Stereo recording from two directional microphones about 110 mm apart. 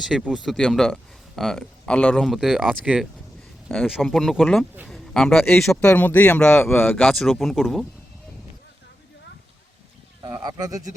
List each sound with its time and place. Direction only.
0.3 s speech: centre (ahead or behind)
4.9 s a sound: 5° left (ahead or behind)
5.5 s speech: 5° left (ahead or behind)
10.2 s speech: 40° right (ahead or behind)